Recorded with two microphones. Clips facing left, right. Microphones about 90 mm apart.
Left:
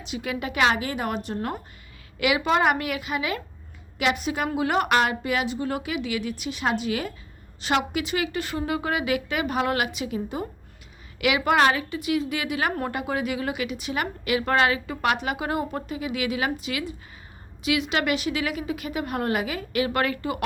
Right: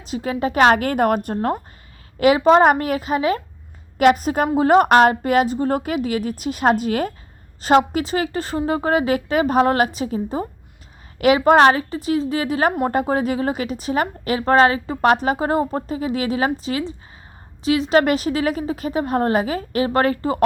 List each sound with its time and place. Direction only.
0.0 s a woman's voice: 35° right (ahead or behind)